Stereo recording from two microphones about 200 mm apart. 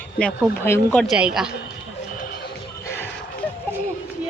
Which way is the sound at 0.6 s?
10° left (ahead or behind).